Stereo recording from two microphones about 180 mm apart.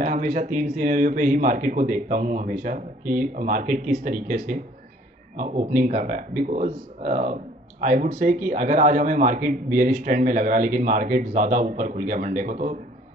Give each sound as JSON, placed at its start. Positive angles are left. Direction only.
{"t": 0.0, "sound": "a man's voice", "side_deg": -45}